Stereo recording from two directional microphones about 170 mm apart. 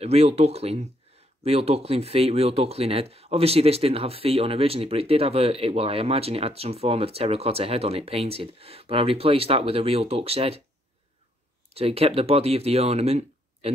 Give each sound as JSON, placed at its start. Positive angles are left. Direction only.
{"t": 0.0, "sound": "speech", "side_deg": -35}
{"t": 11.7, "sound": "speech", "side_deg": -35}